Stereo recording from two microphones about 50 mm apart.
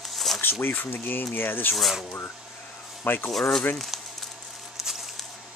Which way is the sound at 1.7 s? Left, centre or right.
Centre.